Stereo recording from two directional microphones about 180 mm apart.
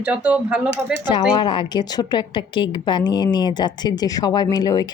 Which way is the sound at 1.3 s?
25° left (ahead or behind).